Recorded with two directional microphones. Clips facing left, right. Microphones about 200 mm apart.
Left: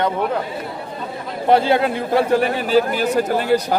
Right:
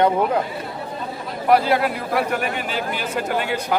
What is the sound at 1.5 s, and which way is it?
A man's voice, 25° left (ahead or behind).